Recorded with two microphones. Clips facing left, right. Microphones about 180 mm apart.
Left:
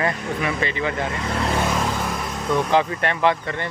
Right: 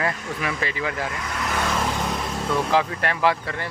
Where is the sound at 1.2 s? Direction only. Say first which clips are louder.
Left 7 dB; 30° left (ahead or behind).